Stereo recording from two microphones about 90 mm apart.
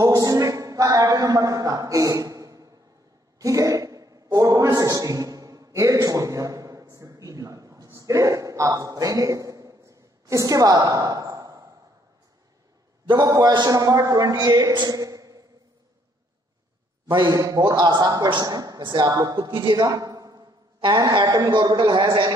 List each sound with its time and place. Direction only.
0.0 s a sound: 40° right (ahead or behind)
13.1 s a man's voice: 45° right (ahead or behind)
17.1 s speech: 55° right (ahead or behind)
17.4 s a man's voice: 45° right (ahead or behind); by 19.8 s 60° right (ahead or behind)
19.8 s a man's voice: 45° right (ahead or behind); by 22.3 s 60° right (ahead or behind)